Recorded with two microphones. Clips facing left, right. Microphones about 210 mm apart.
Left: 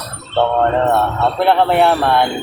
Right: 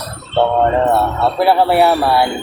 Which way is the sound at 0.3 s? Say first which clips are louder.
Right 1 dB; 5° right (ahead or behind).